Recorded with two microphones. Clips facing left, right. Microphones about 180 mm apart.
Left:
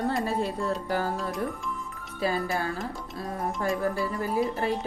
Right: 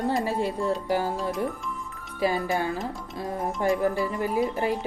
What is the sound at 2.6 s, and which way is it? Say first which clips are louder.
Speech: right 3 dB; 15° right (ahead or behind).